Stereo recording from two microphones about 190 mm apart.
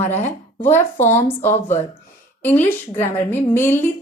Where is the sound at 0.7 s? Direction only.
40° left (ahead or behind).